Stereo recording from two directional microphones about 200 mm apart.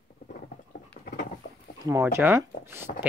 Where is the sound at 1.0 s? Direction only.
45° left (ahead or behind).